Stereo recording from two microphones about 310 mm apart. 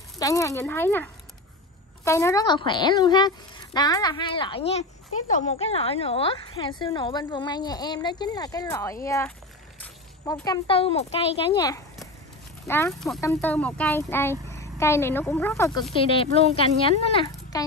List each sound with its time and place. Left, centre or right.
0.2 s a woman's voice: centre